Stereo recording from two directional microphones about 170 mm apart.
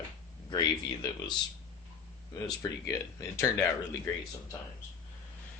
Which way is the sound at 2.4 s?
20° left (ahead or behind).